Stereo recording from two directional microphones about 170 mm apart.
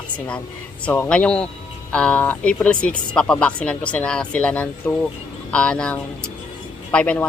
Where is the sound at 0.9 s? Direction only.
10° left (ahead or behind).